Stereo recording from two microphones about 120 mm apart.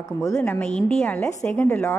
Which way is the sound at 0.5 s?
10° left (ahead or behind).